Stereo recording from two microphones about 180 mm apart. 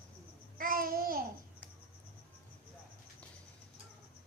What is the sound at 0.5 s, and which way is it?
Child singing, 50° right (ahead or behind).